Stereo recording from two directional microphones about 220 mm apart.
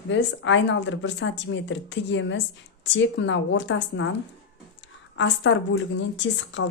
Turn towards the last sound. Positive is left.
turn(degrees=55)  # may be behind; listen again after turning